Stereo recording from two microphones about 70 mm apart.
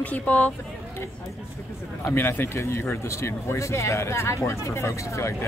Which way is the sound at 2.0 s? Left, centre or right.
Left.